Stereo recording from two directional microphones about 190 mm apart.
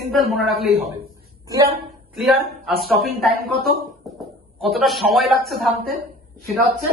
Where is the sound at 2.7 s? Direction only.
55° right (ahead or behind).